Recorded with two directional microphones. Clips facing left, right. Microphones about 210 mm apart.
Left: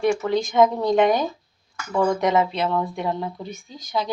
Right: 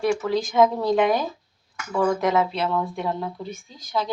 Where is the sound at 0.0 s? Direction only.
5° right (ahead or behind).